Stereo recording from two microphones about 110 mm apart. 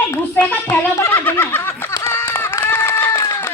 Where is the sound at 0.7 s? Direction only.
20° left (ahead or behind).